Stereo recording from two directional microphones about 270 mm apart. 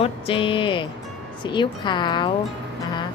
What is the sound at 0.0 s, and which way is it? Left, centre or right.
Speech, centre.